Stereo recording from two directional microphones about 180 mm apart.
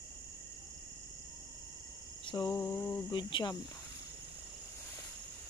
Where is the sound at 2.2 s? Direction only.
20° left (ahead or behind).